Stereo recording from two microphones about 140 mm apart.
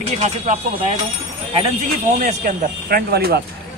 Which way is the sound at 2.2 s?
80° right.